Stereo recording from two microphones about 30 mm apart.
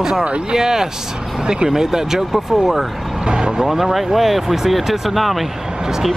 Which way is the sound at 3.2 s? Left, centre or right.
Right.